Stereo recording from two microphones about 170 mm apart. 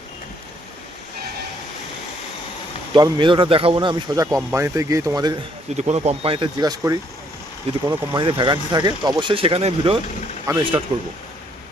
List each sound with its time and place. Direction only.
2.9 s speech: 30° right (ahead or behind)
5.7 s speech: 40° right (ahead or behind)